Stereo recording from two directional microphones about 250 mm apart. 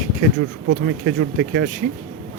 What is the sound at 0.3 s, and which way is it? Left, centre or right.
Speech, right.